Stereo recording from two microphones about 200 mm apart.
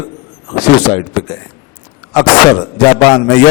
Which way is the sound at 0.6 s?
25° left (ahead or behind).